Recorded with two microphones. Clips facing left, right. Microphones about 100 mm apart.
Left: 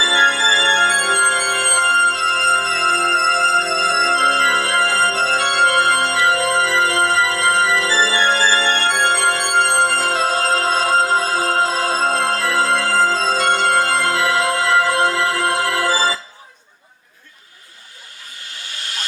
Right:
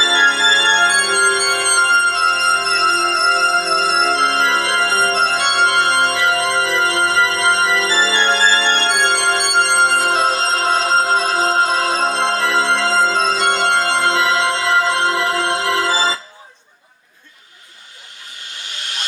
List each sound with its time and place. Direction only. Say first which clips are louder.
0.0 s organ: right 1 dB; 20° right (ahead or behind)
9.7 s music: right 2 dB; 20° right (ahead or behind)
18.5 s hiss: right 1 dB; 20° right (ahead or behind)